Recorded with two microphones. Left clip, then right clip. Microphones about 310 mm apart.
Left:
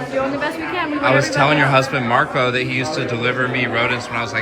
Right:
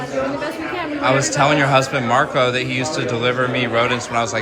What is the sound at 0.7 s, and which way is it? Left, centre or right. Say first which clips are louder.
A woman's voice: left 1 dB; centre.